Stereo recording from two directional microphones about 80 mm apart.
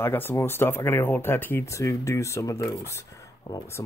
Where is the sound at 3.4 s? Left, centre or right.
Left.